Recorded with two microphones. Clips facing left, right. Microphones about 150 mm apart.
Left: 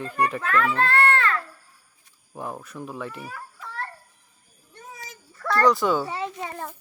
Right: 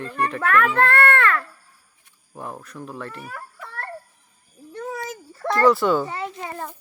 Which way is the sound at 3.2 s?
55° right (ahead or behind).